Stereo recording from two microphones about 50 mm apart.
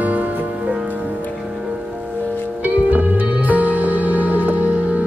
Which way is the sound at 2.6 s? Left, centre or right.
Right.